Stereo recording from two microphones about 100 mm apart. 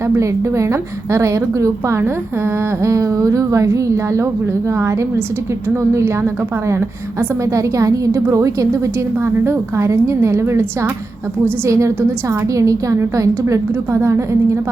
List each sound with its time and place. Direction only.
0.1 s a woman's voice: 30° right (ahead or behind)